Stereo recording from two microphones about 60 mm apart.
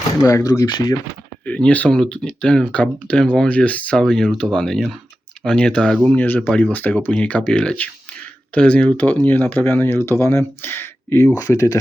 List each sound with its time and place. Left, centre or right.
0.2 s speech: left
1.5 s speech: left
3.9 s speech: centre
6.1 s speech: left
6.5 s speech: centre
9.6 s speech: left
11.3 s speech: left